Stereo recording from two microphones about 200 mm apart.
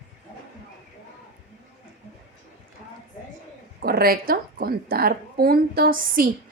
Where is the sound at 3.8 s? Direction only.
50° right (ahead or behind).